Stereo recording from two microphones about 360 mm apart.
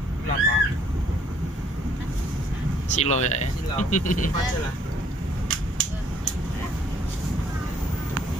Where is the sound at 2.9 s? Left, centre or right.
Centre.